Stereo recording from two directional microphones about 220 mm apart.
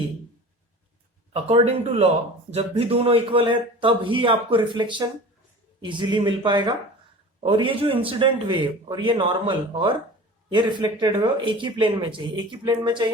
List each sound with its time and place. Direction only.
1.3 s a man's voice: 25° right (ahead or behind)